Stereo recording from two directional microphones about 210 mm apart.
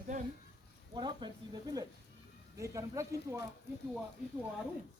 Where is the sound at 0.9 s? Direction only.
20° right (ahead or behind).